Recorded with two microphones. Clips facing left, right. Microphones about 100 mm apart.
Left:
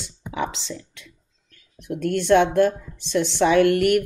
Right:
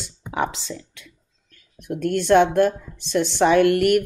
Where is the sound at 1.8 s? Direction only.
50° right (ahead or behind).